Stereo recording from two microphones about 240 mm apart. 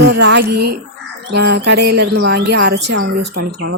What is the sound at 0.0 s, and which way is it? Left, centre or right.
A woman's voice, right.